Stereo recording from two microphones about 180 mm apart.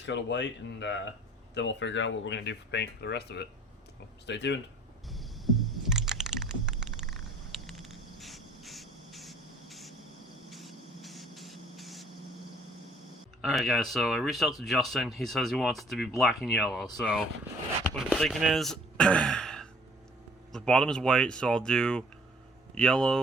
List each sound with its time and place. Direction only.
0.0 s speech: 80° left
1.5 s speech: 90° left; by 4.6 s 70° left (ahead or behind)
5.1 s a sound: centre (ahead or behind)
7.1 s insect: centre (ahead or behind)
10.5 s spray: centre (ahead or behind)
13.4 s speech: centre (ahead or behind)